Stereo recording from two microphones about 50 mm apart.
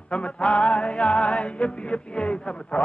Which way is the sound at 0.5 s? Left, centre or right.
Centre.